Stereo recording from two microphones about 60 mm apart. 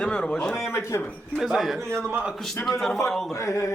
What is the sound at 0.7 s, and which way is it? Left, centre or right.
Speech, left.